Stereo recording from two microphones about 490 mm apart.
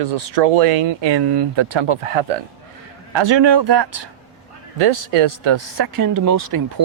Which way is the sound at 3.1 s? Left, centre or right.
Right.